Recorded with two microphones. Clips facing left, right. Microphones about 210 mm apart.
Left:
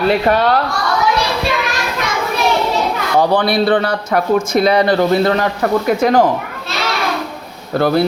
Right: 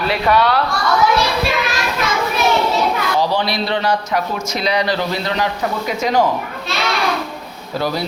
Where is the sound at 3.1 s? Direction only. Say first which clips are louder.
Left 5 dB; 55° left (ahead or behind).